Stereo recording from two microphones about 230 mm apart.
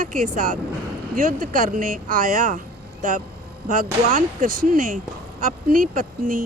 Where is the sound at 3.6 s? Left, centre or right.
Right.